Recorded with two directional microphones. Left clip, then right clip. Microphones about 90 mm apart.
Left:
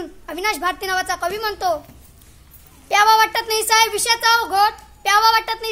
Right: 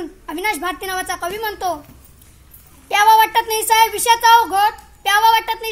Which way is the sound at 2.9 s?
25° left (ahead or behind).